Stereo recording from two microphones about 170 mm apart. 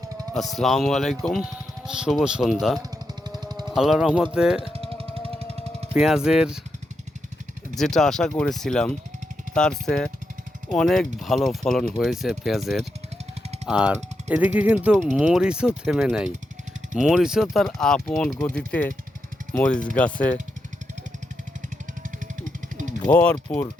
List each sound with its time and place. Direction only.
0.3 s speech: centre (ahead or behind)
3.2 s a sound: 25° right (ahead or behind)
3.7 s speech: centre (ahead or behind)
5.9 s speech: 5° right (ahead or behind)
7.8 s speech: 5° left (ahead or behind)
23.1 s speech: 10° left (ahead or behind)